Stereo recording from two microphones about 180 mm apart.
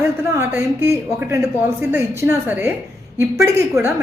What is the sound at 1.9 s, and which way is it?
A woman's voice, 10° right (ahead or behind).